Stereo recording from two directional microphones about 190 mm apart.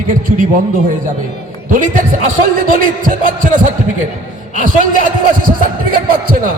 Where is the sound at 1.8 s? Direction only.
45° right (ahead or behind).